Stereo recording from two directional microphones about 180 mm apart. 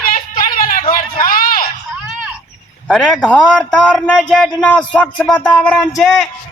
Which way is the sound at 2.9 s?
5° left (ahead or behind).